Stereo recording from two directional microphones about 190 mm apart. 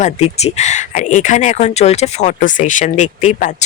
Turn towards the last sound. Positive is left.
turn(degrees=40)  # may be behind; listen again after turning